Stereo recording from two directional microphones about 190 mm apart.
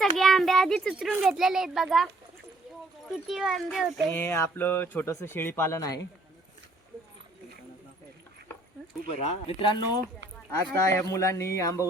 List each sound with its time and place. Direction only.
0.0 s a sound: centre (ahead or behind)
1.2 s speech: centre (ahead or behind)
3.2 s speech: centre (ahead or behind)
4.1 s speech: 15° left (ahead or behind)
9.0 s speech: 30° left (ahead or behind)